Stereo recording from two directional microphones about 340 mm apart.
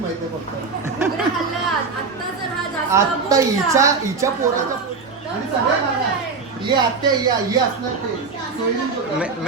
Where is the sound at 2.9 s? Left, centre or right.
Centre.